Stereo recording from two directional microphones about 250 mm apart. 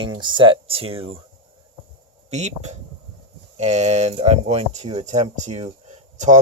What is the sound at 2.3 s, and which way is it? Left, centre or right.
Speech, right.